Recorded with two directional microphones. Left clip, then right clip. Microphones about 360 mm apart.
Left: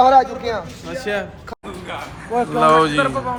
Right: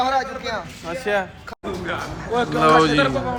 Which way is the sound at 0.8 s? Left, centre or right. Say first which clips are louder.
Right 2 dB; centre.